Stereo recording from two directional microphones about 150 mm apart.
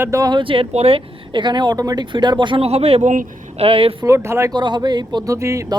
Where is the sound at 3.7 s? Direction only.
40° right (ahead or behind).